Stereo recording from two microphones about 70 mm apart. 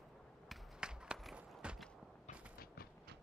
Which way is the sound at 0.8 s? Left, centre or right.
Centre.